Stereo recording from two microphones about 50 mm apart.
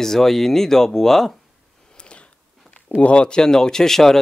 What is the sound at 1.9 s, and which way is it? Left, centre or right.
Speech, left.